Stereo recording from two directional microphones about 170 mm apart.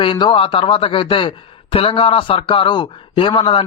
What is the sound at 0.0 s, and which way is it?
A man's voice, 30° left (ahead or behind).